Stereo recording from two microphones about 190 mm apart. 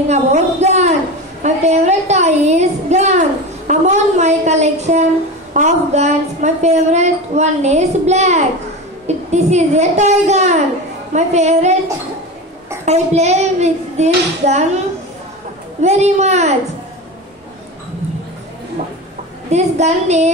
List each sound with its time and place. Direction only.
0.1 s a woman's voice: 35° right (ahead or behind)
12.8 s a woman's voice: 35° right (ahead or behind)
15.8 s a woman's voice: 35° right (ahead or behind)
19.5 s a woman's voice: 35° right (ahead or behind)